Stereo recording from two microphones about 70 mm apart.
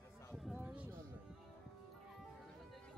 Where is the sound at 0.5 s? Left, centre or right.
Right.